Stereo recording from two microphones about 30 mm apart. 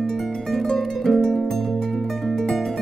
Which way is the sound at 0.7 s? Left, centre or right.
Centre.